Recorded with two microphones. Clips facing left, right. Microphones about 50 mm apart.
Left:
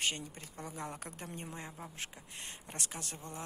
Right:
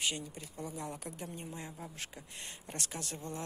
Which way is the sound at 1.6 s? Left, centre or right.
Centre.